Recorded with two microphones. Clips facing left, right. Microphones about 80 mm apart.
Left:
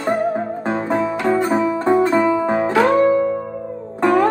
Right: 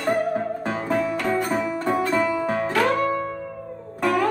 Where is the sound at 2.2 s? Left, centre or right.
Left.